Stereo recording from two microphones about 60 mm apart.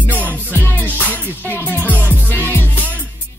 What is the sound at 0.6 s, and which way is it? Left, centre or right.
Music, left.